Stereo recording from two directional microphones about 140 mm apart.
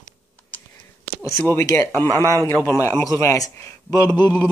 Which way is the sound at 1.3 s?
20° left (ahead or behind).